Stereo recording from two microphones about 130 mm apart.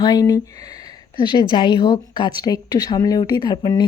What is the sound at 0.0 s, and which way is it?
A woman's voice, 30° left (ahead or behind).